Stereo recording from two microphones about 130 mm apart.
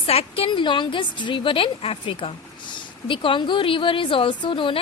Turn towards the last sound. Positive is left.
turn(degrees=40)  # may be behind; listen again after turning